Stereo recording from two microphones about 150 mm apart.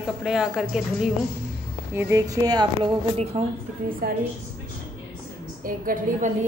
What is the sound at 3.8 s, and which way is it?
Speech, 70° right (ahead or behind).